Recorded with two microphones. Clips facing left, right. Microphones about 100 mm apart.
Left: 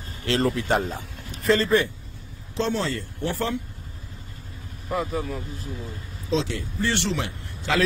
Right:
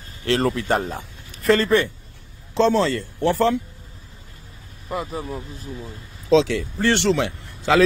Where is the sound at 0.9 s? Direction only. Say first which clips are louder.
Right 1 dB; 55° right (ahead or behind).